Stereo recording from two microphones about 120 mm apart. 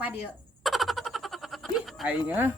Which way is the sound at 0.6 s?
Centre (ahead or behind).